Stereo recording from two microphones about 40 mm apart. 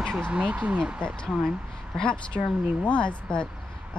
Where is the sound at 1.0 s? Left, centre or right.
Left.